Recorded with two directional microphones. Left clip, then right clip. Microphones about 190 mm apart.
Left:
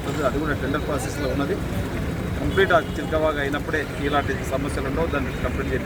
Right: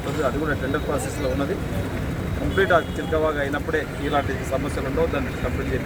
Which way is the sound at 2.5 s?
5° left (ahead or behind).